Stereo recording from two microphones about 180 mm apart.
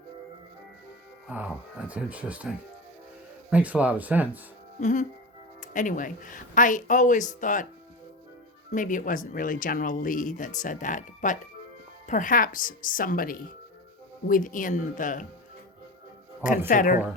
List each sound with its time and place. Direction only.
1.3 s speech: 10° right (ahead or behind)
3.5 s speech: 10° right (ahead or behind)
4.8 s speech: 45° left (ahead or behind)
8.7 s speech: 45° left (ahead or behind)
16.4 s speech: 45° left (ahead or behind)